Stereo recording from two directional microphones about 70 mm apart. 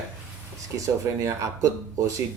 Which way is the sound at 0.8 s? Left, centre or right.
Right.